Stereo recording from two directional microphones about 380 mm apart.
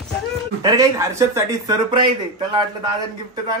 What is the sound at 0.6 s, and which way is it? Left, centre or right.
Speech, centre.